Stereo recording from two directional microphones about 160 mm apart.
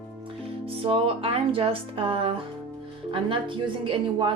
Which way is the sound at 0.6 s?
35° right (ahead or behind).